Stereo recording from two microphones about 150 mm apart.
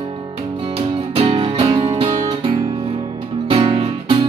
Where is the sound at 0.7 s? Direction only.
40° right (ahead or behind).